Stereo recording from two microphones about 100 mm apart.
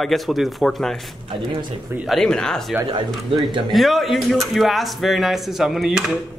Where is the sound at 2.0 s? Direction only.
5° left (ahead or behind).